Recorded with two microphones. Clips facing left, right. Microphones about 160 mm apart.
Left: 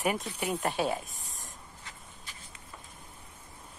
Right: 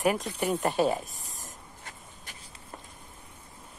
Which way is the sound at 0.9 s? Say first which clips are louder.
Right 3 dB; centre (ahead or behind).